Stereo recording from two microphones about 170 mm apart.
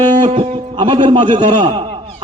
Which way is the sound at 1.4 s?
45° right (ahead or behind).